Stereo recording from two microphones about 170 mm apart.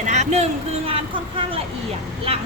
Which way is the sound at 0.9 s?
30° right (ahead or behind).